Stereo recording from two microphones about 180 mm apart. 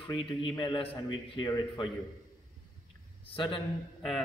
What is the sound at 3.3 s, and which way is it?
Speech, 30° left (ahead or behind).